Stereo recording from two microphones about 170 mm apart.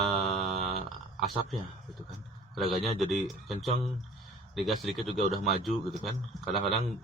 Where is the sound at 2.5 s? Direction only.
Centre (ahead or behind).